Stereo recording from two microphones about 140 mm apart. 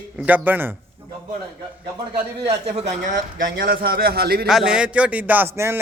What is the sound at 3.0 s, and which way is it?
A man's voice, 90° right.